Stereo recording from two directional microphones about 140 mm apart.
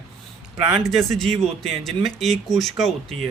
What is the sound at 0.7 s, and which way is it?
Speech, centre (ahead or behind).